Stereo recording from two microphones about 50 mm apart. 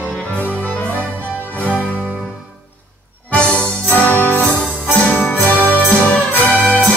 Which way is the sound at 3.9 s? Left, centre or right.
Left.